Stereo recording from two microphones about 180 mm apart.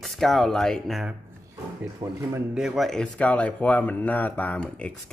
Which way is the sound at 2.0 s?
20° right (ahead or behind).